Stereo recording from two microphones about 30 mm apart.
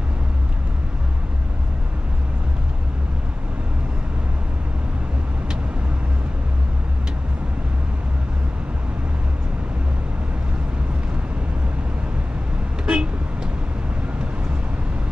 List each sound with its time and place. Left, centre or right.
12.8 s vehicle: right